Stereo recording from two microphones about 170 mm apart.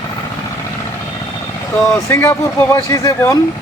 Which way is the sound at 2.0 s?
15° left (ahead or behind).